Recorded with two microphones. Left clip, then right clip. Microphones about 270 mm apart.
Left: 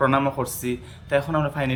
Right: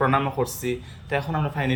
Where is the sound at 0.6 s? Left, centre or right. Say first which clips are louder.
Right 1 dB; centre.